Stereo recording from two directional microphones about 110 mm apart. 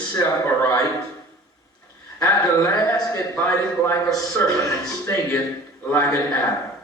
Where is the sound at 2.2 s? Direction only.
35° left (ahead or behind).